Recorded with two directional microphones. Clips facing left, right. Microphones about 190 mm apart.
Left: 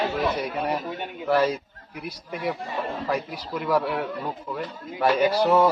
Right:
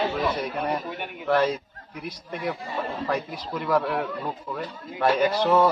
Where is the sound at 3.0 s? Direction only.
5° left (ahead or behind).